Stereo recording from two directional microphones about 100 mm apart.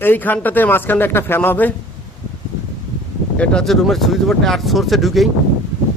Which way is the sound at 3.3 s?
10° left (ahead or behind).